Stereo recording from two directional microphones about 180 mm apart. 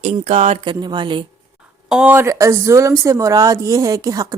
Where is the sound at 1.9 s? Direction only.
10° right (ahead or behind).